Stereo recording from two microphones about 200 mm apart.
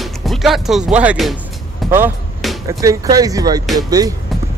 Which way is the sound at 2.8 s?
15° right (ahead or behind).